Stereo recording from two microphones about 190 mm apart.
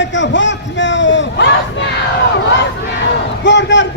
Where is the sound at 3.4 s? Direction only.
70° left (ahead or behind).